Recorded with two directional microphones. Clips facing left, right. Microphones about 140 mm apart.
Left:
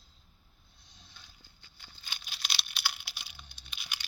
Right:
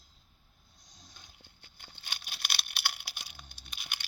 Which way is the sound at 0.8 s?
40° right (ahead or behind).